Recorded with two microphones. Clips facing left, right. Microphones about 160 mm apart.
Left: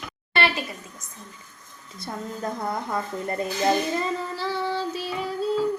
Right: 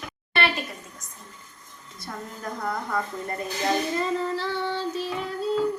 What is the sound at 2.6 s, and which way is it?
Speech, 25° left (ahead or behind).